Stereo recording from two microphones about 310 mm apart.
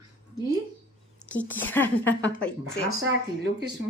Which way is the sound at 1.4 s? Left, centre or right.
Centre.